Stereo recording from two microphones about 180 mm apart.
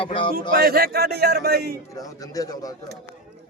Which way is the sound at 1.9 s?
20° left (ahead or behind).